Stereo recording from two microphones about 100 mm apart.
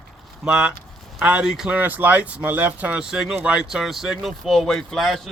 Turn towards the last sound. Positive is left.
turn(degrees=5)  # may be behind; listen again after turning